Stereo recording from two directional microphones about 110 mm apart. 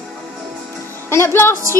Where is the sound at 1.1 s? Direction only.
20° left (ahead or behind).